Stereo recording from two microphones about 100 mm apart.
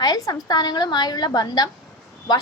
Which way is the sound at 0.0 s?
40° left (ahead or behind).